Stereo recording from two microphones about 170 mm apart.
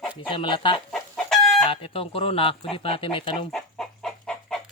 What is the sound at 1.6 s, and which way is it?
Speech, 35° left (ahead or behind).